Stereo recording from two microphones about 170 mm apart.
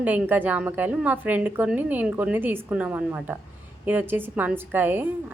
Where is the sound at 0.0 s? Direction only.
10° right (ahead or behind).